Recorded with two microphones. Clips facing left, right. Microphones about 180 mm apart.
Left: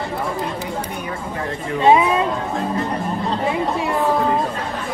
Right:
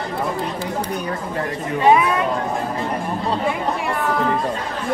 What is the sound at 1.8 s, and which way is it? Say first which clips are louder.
Speech: left 1 dB; 25° left (ahead or behind).